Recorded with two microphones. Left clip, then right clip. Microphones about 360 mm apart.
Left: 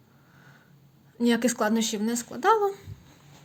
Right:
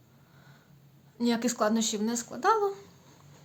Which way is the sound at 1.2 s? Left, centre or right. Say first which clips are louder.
Left 4 dB; centre.